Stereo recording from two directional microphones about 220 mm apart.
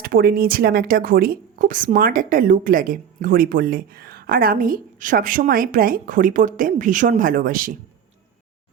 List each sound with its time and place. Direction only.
0.0 s a woman's voice: 45° right (ahead or behind)